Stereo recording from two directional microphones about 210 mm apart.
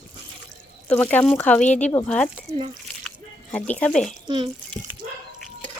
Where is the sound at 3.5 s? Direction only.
5° left (ahead or behind).